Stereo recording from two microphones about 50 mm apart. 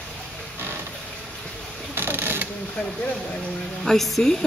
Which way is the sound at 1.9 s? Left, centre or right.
Right.